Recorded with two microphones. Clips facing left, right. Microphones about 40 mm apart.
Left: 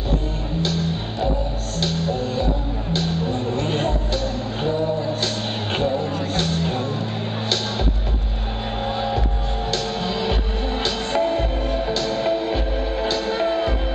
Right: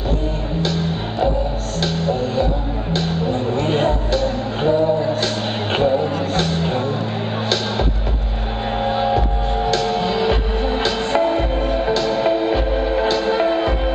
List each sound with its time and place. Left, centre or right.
2.9 s music: centre
5.8 s vehicle: centre
6.3 s music: centre
8.8 s music: centre